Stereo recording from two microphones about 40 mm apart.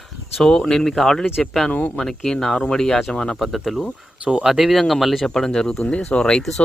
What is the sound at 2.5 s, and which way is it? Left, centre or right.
Speech, centre.